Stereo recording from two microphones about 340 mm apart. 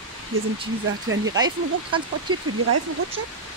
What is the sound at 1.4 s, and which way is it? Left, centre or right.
Speech, centre.